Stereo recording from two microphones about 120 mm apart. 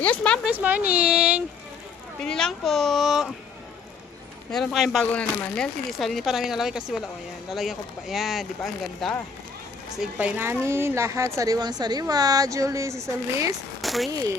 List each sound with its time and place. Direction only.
0.0 s speech: 10° left (ahead or behind)
0.4 s speech: 15° right (ahead or behind)
2.2 s speech: 5° left (ahead or behind)
4.5 s speech: centre (ahead or behind)
5.1 s speech: 10° left (ahead or behind)
10.0 s a woman's voice: 10° right (ahead or behind)
13.8 s speech: centre (ahead or behind)
14.1 s a woman's voice: 30° right (ahead or behind)